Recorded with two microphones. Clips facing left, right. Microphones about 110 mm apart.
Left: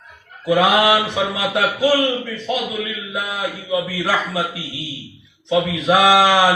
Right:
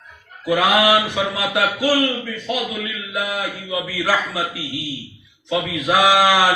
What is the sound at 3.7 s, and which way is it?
Speech, 25° left (ahead or behind).